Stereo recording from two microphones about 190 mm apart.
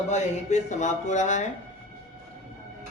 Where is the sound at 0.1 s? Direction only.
40° left (ahead or behind).